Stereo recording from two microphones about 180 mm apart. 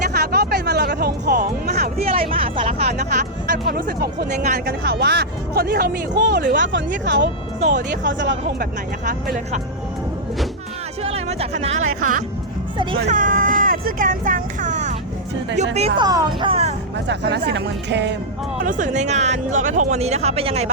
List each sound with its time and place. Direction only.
0.1 s music: 60° right (ahead or behind)
2.0 s speech: 30° right (ahead or behind)
3.0 s speech: 55° right (ahead or behind)
6.6 s speech: 85° right
11.0 s speech: 35° right (ahead or behind)
12.7 s speech: 25° right (ahead or behind)
13.1 s speech: 45° right (ahead or behind)
16.0 s speech: 20° right (ahead or behind)
17.1 s a woman's voice: 75° right (ahead or behind)
18.6 s speech: 45° right (ahead or behind)